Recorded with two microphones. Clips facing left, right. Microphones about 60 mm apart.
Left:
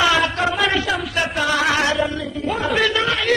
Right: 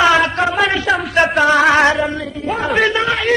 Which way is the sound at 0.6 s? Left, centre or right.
Centre.